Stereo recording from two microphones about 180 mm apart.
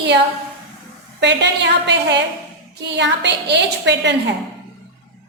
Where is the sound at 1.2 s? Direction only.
75° right (ahead or behind).